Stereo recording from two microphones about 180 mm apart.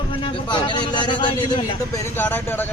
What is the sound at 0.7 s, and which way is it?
Speech, 25° left (ahead or behind).